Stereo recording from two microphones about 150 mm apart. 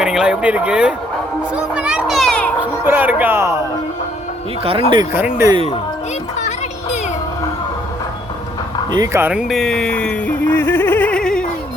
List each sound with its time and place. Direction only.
0.0 s speech: 5° right (ahead or behind)
1.5 s children playing: 5° right (ahead or behind)
2.8 s speech: 10° right (ahead or behind)
4.6 s speech: 40° right (ahead or behind)
5.1 s speech: 15° right (ahead or behind)
5.5 s speech: 35° right (ahead or behind)
8.9 s speech: 25° right (ahead or behind)
9.2 s music: 5° right (ahead or behind)